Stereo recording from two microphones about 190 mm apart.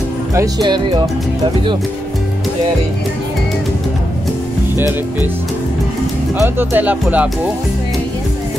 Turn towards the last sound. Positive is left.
turn(degrees=-10)  # may be behind; listen again after turning